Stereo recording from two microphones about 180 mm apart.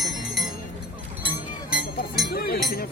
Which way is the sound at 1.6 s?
5° right (ahead or behind).